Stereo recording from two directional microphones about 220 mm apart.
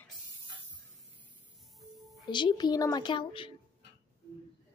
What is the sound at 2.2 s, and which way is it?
A woman's voice, 20° left (ahead or behind).